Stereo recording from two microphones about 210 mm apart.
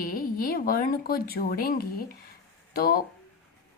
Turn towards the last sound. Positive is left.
turn(degrees=45)  # may be behind; listen again after turning